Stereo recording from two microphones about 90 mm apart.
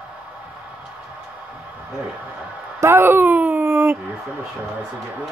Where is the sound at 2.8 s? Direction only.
25° right (ahead or behind).